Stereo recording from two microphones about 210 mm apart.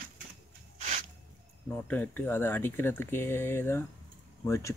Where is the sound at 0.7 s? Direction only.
35° right (ahead or behind).